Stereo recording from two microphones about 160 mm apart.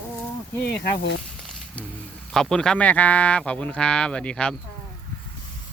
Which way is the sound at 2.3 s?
5° left (ahead or behind).